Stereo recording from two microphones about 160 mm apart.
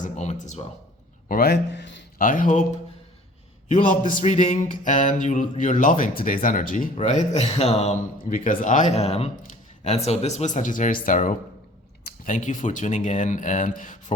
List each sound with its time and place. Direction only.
0.0 s speech: 50° left (ahead or behind)
1.3 s speech: 85° left; by 2.6 s 50° left (ahead or behind)
3.7 s speech: 50° left (ahead or behind)
6.9 s speech: 45° left (ahead or behind)
8.3 s speech: 55° left (ahead or behind)